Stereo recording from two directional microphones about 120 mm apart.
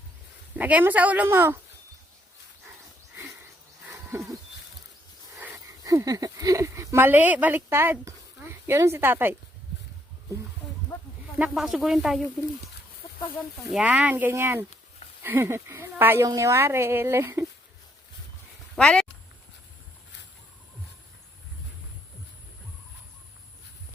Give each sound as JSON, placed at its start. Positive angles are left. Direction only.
{"t": 0.5, "sound": "speech", "side_deg": -15}
{"t": 3.8, "sound": "a sound", "side_deg": -15}
{"t": 5.8, "sound": "speech", "side_deg": -30}
{"t": 11.3, "sound": "speech", "side_deg": -5}
{"t": 13.7, "sound": "a woman's voice", "side_deg": -10}
{"t": 18.8, "sound": "speech", "side_deg": 5}